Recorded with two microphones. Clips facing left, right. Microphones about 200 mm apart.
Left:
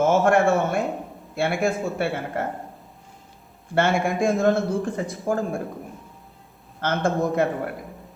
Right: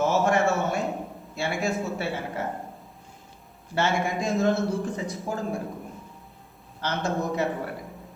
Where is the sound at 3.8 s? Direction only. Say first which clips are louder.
Left 5 dB; 55° left (ahead or behind).